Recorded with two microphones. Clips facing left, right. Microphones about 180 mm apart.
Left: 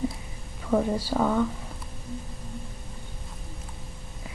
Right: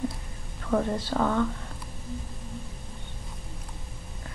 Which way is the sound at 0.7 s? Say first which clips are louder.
Left 2 dB; 10° left (ahead or behind).